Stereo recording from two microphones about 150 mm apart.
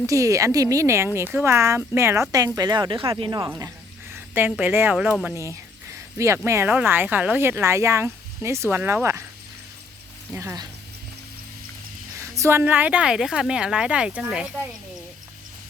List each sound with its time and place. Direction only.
0.0 s speech: 20° right (ahead or behind)
4.1 s speech: 15° right (ahead or behind)
5.3 s speech: 20° right (ahead or behind)
10.3 s speech: 20° right (ahead or behind)
12.1 s speech: 20° right (ahead or behind)